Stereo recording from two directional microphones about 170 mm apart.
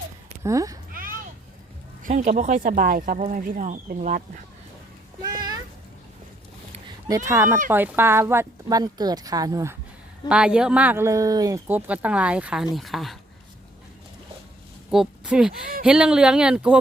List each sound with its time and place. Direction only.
0.4 s speech: 20° right (ahead or behind)
2.0 s speech: 50° right (ahead or behind)
5.2 s a child's voice: 25° right (ahead or behind)
7.3 s speech: 15° right (ahead or behind)
10.2 s speech: 5° right (ahead or behind)
14.8 s speech: 5° right (ahead or behind)